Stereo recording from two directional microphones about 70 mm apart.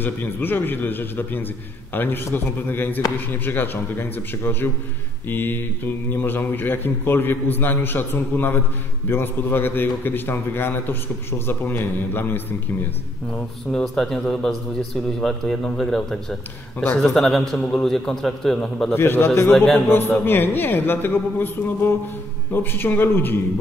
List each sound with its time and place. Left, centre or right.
0.0 s a man's voice: left
13.3 s a man's voice: centre
18.9 s a man's voice: left
19.5 s a man's voice: centre
19.9 s a man's voice: left